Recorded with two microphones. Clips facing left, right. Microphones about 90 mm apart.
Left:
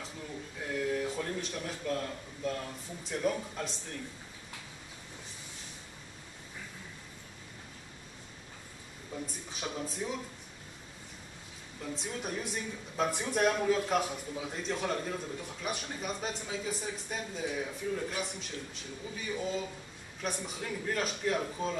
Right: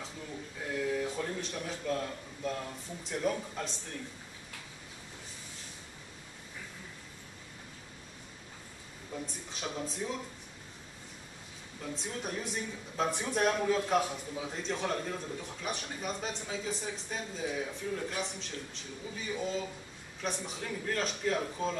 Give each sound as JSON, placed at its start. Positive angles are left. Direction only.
{"t": 0.7, "sound": "a man's voice", "side_deg": 0}
{"t": 9.2, "sound": "speech", "side_deg": 5}
{"t": 11.8, "sound": "a man's voice", "side_deg": 0}